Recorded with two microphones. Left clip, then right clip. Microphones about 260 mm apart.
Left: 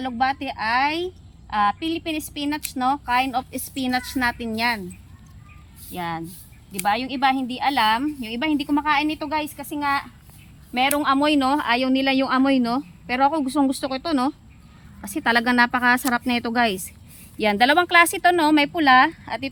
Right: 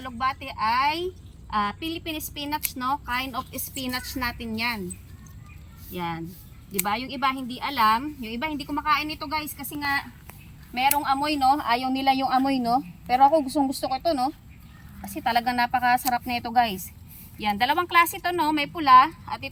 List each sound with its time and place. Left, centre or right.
0.0 s a woman's voice: centre
5.9 s a woman's voice: centre